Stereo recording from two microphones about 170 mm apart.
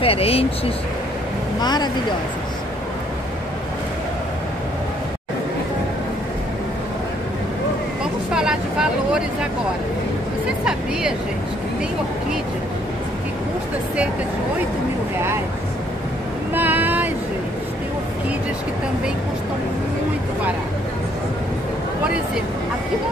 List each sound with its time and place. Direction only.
0.0 s speech: 35° left (ahead or behind)
1.6 s speech: 25° left (ahead or behind)
8.0 s vehicle: 5° right (ahead or behind)
10.6 s vehicle: 5° right (ahead or behind)
16.5 s vehicle: 10° right (ahead or behind)